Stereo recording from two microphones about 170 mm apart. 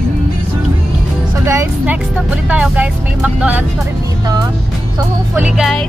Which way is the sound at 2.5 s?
5° right (ahead or behind).